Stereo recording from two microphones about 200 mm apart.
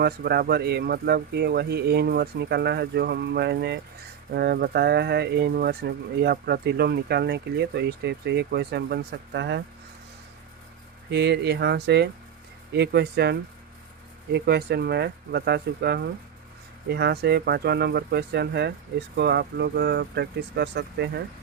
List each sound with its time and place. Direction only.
0.0 s speech: 55° right (ahead or behind)
11.1 s speech: 55° right (ahead or behind)
14.3 s speech: 55° right (ahead or behind)